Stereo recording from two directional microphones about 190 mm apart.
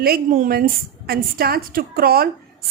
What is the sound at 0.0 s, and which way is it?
A woman's voice, 50° right (ahead or behind).